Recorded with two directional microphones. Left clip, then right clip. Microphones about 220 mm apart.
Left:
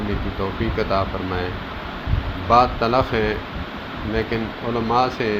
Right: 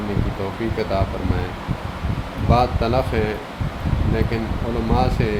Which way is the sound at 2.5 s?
5° right (ahead or behind).